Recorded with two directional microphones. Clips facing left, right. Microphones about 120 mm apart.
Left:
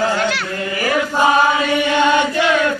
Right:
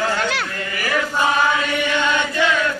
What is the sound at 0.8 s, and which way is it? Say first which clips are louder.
Chant: left 4 dB; 30° left (ahead or behind).